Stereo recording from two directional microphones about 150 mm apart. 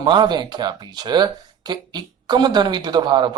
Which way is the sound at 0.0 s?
30° right (ahead or behind).